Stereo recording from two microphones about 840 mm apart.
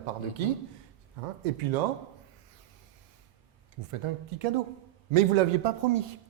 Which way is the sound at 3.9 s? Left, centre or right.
Right.